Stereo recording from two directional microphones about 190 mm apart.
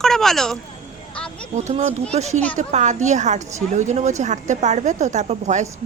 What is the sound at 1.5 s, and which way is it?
A woman's voice, 40° right (ahead or behind).